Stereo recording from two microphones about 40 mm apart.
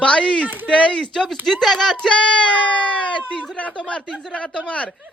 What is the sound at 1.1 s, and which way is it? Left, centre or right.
Speech, centre.